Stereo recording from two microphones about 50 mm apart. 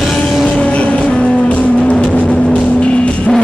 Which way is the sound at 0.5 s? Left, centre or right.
Left.